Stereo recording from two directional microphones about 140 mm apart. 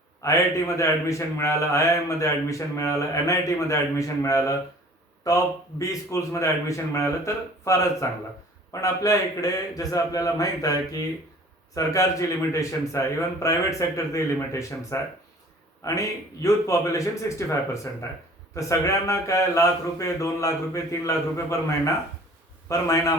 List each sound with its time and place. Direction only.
0.2 s a man's voice: 20° left (ahead or behind)
22.7 s a man's voice: 25° left (ahead or behind)